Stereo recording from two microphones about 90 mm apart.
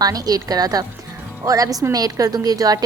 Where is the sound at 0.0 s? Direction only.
45° right (ahead or behind).